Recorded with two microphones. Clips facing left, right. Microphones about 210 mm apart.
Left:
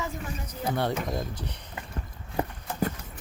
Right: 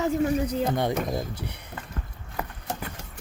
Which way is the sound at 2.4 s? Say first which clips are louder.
Left 4 dB; 30° left (ahead or behind).